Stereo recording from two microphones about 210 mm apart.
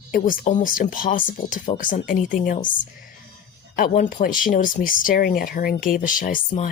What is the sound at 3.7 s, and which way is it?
Speech, 40° left (ahead or behind).